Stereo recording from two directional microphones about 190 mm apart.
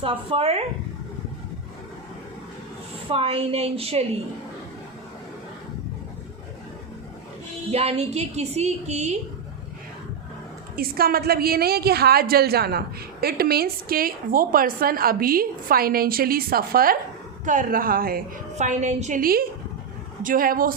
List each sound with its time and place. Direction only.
0.0 s speech: 30° right (ahead or behind)
3.1 s a woman's voice: 30° right (ahead or behind)
7.7 s a woman's voice: 35° right (ahead or behind)
10.8 s a woman's voice: 50° right (ahead or behind)